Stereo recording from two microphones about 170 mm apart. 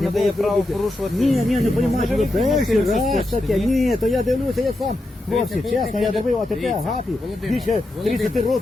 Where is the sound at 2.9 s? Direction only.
45° left (ahead or behind).